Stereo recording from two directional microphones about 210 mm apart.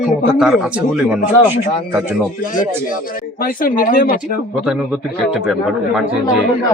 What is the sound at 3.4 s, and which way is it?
Speech, 45° left (ahead or behind).